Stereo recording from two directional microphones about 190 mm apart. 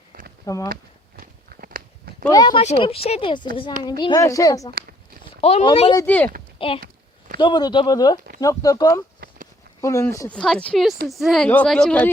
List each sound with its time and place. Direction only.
0.1 s a sound: 50° right (ahead or behind)
0.4 s speech: 15° left (ahead or behind)
0.7 s walk: 50° right (ahead or behind)
2.3 s a woman's voice: 20° left (ahead or behind)
5.4 s a woman's voice: 35° left (ahead or behind)
6.0 s speech: 10° left (ahead or behind)
6.6 s a woman's voice: 30° left (ahead or behind)
10.3 s a woman's voice: 5° left (ahead or behind)